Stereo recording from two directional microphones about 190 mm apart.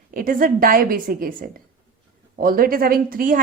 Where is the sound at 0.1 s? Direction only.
45° right (ahead or behind).